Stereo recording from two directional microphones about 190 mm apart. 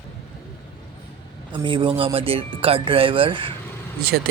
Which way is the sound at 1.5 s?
25° right (ahead or behind).